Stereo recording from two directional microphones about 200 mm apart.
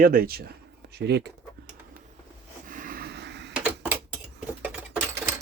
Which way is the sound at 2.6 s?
40° right (ahead or behind).